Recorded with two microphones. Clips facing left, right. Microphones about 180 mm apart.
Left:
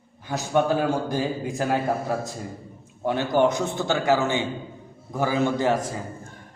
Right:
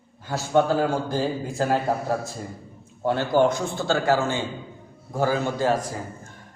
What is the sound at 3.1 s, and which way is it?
A man's voice, 20° left (ahead or behind).